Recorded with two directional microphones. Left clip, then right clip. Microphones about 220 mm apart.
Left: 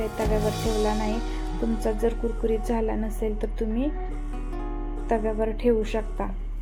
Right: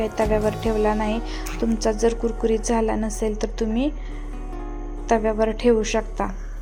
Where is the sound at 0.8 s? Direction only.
15° right (ahead or behind).